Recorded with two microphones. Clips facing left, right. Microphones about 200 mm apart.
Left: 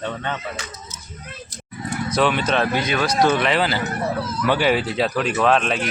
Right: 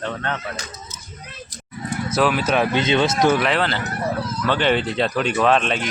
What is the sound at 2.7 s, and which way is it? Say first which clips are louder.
Speech: right 2 dB; 25° right (ahead or behind).